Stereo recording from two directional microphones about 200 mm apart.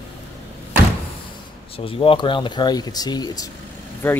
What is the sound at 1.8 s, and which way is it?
Speech, 25° left (ahead or behind).